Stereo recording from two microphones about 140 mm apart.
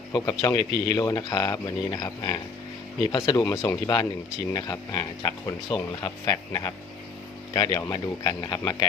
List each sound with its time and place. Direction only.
0.1 s speech: 25° left (ahead or behind)